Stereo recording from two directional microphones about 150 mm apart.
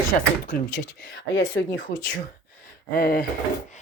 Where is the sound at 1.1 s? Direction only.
90° left.